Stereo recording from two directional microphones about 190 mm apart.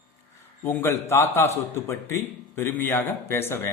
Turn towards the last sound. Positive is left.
turn(degrees=15)  # may be behind; listen again after turning